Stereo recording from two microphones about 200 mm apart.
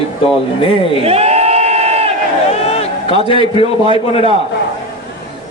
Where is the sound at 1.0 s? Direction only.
30° right (ahead or behind).